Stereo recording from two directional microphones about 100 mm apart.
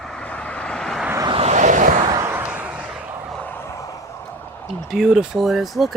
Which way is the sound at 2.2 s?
25° right (ahead or behind).